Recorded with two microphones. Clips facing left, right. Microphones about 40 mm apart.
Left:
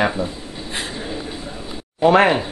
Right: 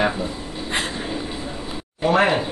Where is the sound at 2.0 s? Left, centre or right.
Left.